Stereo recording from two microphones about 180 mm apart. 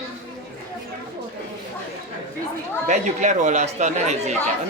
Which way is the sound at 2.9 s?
40° right (ahead or behind).